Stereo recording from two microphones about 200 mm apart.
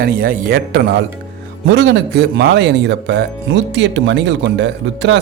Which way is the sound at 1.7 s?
60° right (ahead or behind).